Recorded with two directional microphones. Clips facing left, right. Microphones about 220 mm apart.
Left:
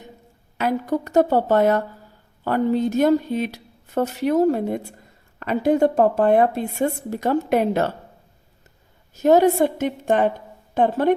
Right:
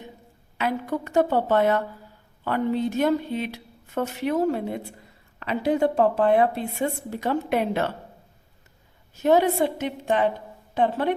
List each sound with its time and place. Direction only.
0.6 s a woman's voice: 40° left (ahead or behind)
9.1 s a woman's voice: 40° left (ahead or behind)